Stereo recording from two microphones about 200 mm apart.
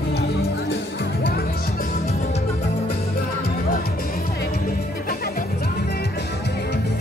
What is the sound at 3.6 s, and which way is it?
Music, 50° left (ahead or behind).